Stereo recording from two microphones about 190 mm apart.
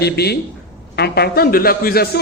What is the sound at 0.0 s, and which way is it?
A man's voice, 60° left (ahead or behind).